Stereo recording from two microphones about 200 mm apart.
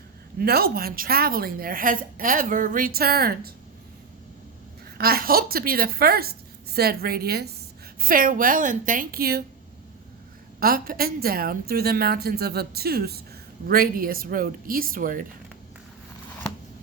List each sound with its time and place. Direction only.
0.3 s a woman's voice: 50° right (ahead or behind)
4.9 s a woman's voice: 50° right (ahead or behind)
10.6 s a woman's voice: 45° right (ahead or behind)